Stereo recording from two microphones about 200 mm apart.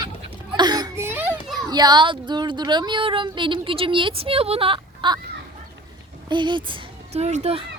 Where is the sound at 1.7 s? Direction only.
20° right (ahead or behind).